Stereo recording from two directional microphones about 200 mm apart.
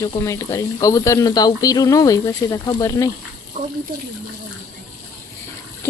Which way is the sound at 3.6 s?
40° right (ahead or behind).